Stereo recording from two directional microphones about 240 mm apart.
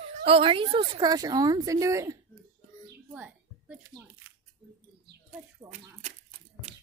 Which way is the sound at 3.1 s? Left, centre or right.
Centre.